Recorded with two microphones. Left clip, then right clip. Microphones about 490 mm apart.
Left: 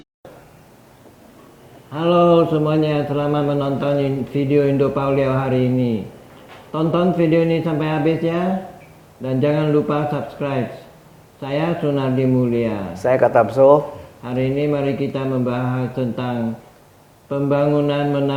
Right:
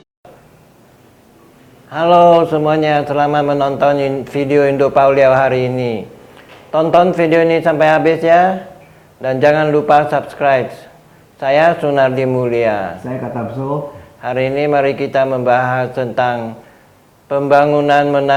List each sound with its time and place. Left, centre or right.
1.9 s speech: right
13.0 s speech: left
14.2 s speech: right